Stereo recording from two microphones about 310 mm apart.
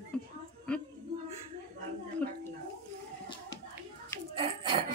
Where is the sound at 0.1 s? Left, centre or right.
Centre.